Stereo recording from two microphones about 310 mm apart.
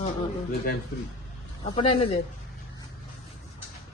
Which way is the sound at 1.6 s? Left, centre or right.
Centre.